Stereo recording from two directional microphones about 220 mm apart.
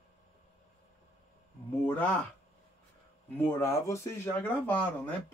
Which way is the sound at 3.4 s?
10° left (ahead or behind).